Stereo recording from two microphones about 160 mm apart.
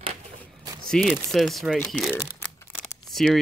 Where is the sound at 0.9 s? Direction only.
Centre (ahead or behind).